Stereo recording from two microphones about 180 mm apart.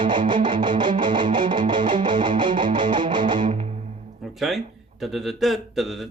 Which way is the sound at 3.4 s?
35° right (ahead or behind).